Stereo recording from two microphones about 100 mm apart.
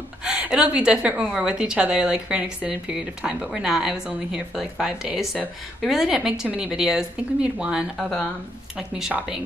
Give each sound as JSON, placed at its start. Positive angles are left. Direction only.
{"t": 0.2, "sound": "a woman's voice", "side_deg": -10}